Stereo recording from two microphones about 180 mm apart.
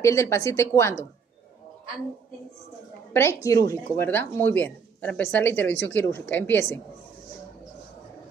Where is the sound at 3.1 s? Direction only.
15° left (ahead or behind).